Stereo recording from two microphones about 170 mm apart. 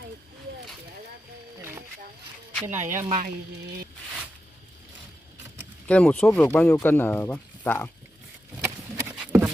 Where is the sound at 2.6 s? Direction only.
15° right (ahead or behind).